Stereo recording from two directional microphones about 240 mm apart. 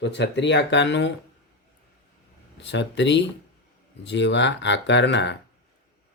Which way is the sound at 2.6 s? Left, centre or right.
Left.